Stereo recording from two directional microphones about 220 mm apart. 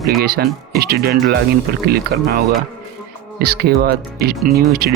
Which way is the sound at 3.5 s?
45° right (ahead or behind).